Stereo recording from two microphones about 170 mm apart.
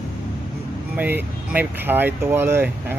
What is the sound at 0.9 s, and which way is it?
Speech, 10° right (ahead or behind).